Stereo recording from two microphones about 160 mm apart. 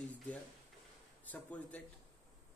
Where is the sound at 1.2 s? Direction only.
10° left (ahead or behind).